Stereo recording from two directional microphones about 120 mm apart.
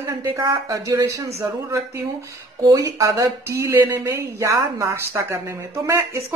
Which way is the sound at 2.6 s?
30° right (ahead or behind).